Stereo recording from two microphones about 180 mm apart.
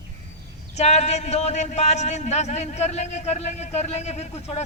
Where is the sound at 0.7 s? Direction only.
35° left (ahead or behind).